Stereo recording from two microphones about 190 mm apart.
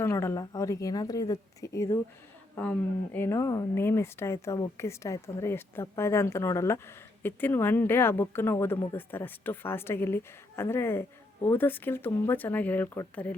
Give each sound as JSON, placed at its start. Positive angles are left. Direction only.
{"t": 0.0, "sound": "speech", "side_deg": 15}